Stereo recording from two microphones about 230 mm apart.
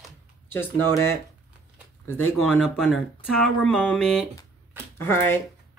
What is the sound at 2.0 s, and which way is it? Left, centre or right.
Speech, left.